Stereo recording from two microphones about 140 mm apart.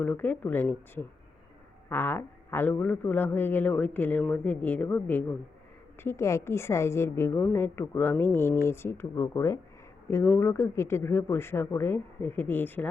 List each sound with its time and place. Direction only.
0.0 s a woman's voice: 10° left (ahead or behind)